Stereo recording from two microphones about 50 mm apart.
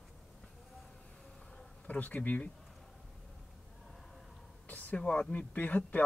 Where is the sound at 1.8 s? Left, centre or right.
Left.